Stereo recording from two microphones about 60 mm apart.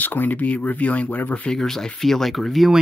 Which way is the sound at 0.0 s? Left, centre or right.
Left.